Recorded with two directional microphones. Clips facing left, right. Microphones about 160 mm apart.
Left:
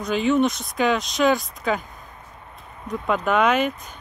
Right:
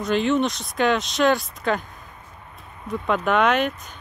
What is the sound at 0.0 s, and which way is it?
Speech, centre (ahead or behind).